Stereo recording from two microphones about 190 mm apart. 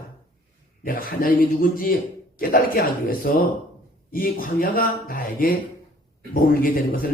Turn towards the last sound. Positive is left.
turn(degrees=50)  # may be behind; listen again after turning